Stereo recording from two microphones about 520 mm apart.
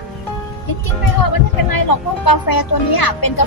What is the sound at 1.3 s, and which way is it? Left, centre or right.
Speech, left.